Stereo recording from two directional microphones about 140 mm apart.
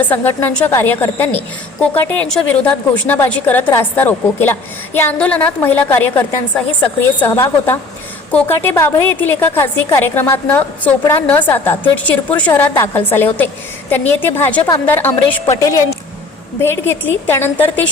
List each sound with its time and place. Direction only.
0.0 s a woman's voice: 15° left (ahead or behind)